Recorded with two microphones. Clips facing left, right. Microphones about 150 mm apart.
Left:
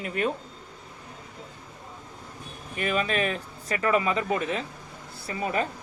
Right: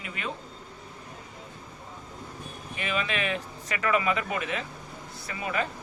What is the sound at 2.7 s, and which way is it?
Speech, 45° left (ahead or behind).